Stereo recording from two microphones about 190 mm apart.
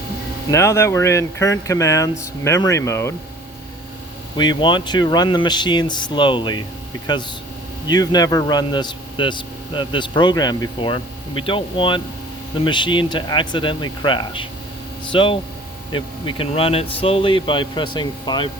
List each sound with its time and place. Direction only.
0.5 s speech: 15° left (ahead or behind)
4.4 s speech: 25° left (ahead or behind)
7.9 s speech: 20° left (ahead or behind)